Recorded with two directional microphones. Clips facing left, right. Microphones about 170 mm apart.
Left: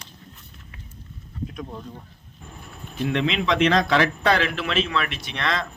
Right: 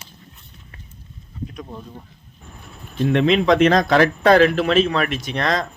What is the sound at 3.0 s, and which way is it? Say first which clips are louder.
A man's voice: right 7 dB; 45° right (ahead or behind).